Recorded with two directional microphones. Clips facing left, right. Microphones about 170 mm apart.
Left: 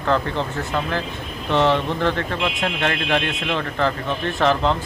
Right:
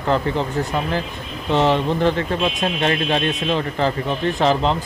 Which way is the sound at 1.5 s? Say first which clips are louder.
Right 1 dB; 15° right (ahead or behind).